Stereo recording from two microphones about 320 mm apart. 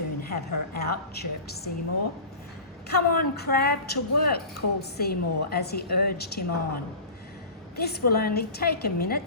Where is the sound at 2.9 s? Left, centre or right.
Left.